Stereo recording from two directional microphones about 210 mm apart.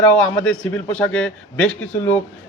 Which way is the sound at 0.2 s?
5° left (ahead or behind).